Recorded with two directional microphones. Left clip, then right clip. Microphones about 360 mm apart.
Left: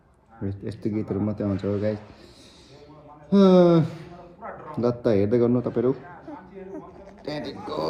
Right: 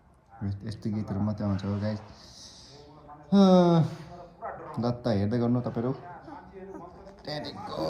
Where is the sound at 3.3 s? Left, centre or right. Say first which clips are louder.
Left 5 dB; centre.